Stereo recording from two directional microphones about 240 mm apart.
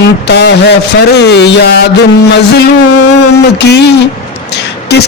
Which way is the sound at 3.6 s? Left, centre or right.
Left.